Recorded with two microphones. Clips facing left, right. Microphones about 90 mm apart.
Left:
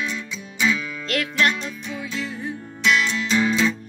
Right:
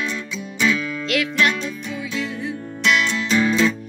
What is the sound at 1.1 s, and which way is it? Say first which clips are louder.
Music: right 2 dB; 45° left (ahead or behind).